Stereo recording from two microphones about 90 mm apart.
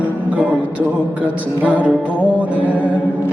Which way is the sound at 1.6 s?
15° right (ahead or behind).